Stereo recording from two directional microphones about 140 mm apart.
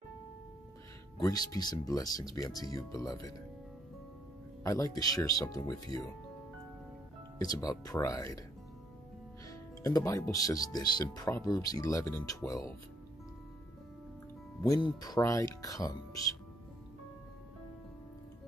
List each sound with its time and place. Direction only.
1.2 s speech: 25° left (ahead or behind)
4.6 s speech: 25° left (ahead or behind)
7.4 s speech: 25° left (ahead or behind)
9.5 s speech: 25° left (ahead or behind)
14.7 s speech: 30° left (ahead or behind)